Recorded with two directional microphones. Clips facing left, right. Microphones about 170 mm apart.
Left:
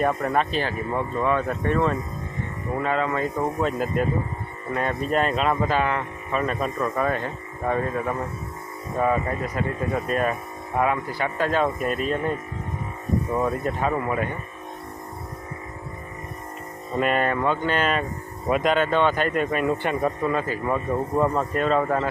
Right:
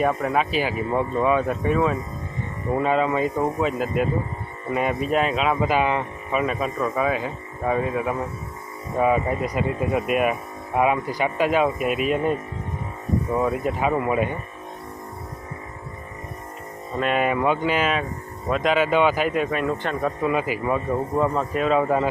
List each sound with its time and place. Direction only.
0.0 s speech: 5° right (ahead or behind)
2.7 s speech: 15° right (ahead or behind)
3.6 s speech: 5° right (ahead or behind)
6.4 s speech: 5° right (ahead or behind)
17.0 s speech: centre (ahead or behind)
17.2 s speech: 10° right (ahead or behind)
18.4 s speech: 5° left (ahead or behind)
18.7 s speech: 10° right (ahead or behind); by 20.1 s 10° left (ahead or behind)
20.2 s speech: 10° right (ahead or behind)